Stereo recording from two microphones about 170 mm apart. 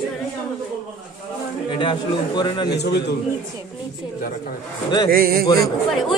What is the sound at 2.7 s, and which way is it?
Speech, 80° left.